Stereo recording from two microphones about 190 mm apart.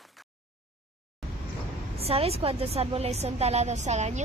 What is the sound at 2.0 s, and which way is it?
Speech, 30° right (ahead or behind).